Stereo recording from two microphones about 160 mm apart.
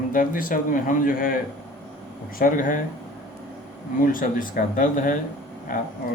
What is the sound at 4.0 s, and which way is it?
A man's voice, 60° left (ahead or behind).